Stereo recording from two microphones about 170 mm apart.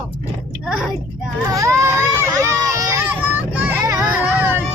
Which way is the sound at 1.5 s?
20° right (ahead or behind).